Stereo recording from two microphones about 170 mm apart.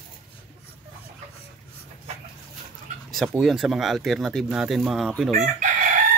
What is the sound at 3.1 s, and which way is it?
Speech, centre (ahead or behind).